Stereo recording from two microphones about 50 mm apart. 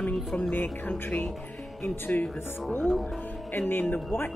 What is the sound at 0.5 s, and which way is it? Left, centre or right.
Speech, left.